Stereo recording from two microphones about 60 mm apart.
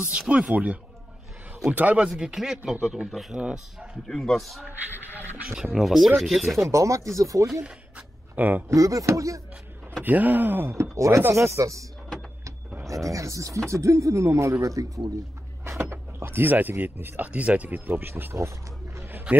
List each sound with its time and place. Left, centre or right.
0.3 s speech: centre
2.1 s speech: centre
3.3 s speech: centre
4.1 s speech: centre
5.5 s speech: centre
6.7 s speech: right
8.4 s speech: right
8.6 s speech: right
10.0 s speech: right
10.7 s chopping: right
11.3 s speech: right
12.9 s speech: right
15.6 s speech: right